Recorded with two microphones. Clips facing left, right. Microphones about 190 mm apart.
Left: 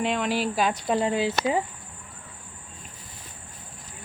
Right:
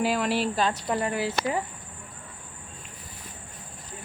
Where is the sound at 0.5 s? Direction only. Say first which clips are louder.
Left 2 dB; 15° left (ahead or behind).